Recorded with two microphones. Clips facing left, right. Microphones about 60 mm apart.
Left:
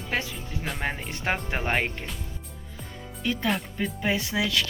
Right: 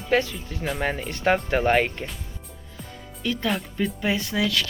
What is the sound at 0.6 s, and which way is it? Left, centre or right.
Speech, centre.